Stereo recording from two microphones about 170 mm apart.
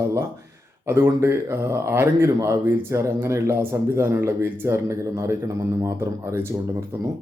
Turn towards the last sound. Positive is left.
turn(degrees=-15)  # may be behind; listen again after turning